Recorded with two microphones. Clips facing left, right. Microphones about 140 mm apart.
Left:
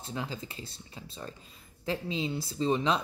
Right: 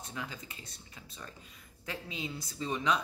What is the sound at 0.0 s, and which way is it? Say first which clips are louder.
Speech: left 5 dB; 30° left (ahead or behind).